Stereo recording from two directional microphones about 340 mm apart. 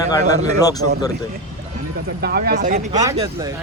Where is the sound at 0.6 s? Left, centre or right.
Centre.